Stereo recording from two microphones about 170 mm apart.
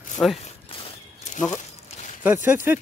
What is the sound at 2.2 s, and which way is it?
Speech, 10° right (ahead or behind).